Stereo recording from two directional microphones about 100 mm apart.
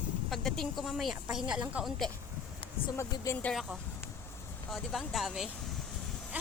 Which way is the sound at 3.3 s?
35° left (ahead or behind).